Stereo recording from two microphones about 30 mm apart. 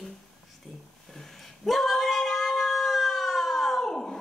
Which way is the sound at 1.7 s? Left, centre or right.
Centre.